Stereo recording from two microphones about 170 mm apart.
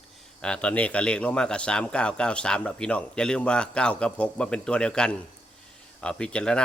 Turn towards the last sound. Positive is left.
turn(degrees=5)  # may be behind; listen again after turning